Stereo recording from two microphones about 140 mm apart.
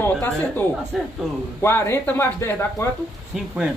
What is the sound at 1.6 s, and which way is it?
Speech, 20° left (ahead or behind).